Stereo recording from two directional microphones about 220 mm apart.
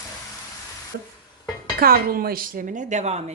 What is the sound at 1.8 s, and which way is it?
Speech, 45° right (ahead or behind).